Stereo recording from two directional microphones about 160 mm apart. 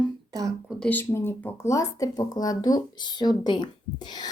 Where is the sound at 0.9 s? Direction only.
15° left (ahead or behind).